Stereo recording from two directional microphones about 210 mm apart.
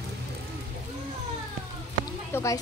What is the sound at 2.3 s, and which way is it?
Speech, 15° left (ahead or behind).